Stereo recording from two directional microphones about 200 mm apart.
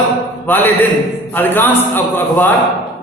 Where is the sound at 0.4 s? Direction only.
10° left (ahead or behind).